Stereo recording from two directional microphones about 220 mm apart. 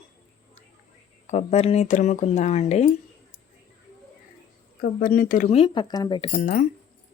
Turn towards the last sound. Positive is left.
turn(degrees=35)  # may be behind; listen again after turning